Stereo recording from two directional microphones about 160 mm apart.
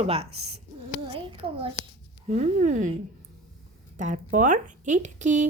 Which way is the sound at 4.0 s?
50° right (ahead or behind).